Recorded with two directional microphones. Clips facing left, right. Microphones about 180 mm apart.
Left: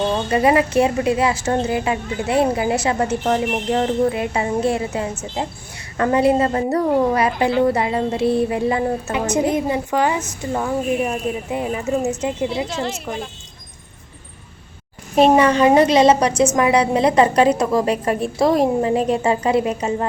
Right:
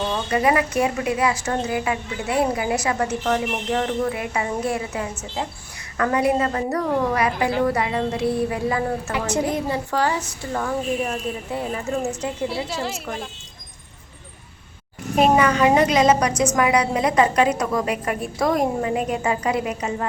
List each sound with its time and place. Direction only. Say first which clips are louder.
0.1 s a woman's voice: left 2 dB; 25° left (ahead or behind)
12.6 s a woman's voice: left 3 dB; centre (ahead or behind)
15.1 s a woman's voice: left 4 dB; 30° left (ahead or behind)